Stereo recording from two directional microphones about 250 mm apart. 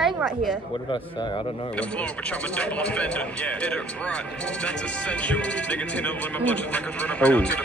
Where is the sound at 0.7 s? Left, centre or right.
Centre.